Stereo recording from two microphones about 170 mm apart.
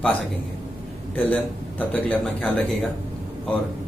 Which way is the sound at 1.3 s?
10° left (ahead or behind).